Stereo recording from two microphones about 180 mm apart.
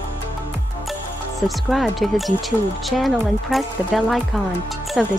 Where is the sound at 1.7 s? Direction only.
Centre (ahead or behind).